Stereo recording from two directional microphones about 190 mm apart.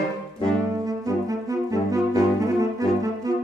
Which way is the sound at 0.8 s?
20° right (ahead or behind).